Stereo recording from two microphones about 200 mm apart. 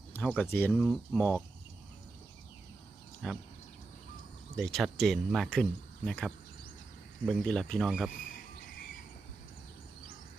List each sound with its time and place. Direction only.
0.1 s speech: 5° left (ahead or behind)
3.2 s speech: centre (ahead or behind)
4.5 s speech: centre (ahead or behind)